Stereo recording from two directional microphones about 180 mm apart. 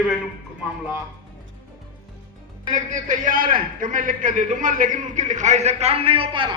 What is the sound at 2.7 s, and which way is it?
A man's voice, 45° right (ahead or behind).